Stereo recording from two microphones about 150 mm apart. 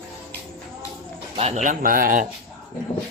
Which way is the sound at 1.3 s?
40° right (ahead or behind).